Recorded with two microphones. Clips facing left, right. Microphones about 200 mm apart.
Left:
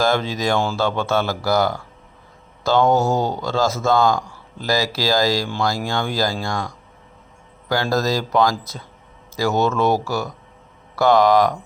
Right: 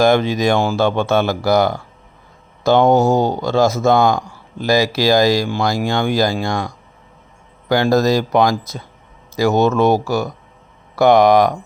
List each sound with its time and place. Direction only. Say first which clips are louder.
0.0 s speech: right 6 dB; 15° right (ahead or behind)
7.7 s speech: right 6 dB; 20° right (ahead or behind)